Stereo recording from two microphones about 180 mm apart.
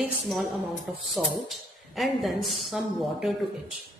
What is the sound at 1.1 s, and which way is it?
A man's voice, centre (ahead or behind).